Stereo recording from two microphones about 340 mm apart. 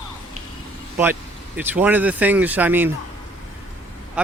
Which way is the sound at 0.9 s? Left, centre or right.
Centre.